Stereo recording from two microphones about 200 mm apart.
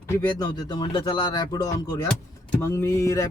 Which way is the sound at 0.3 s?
20° left (ahead or behind).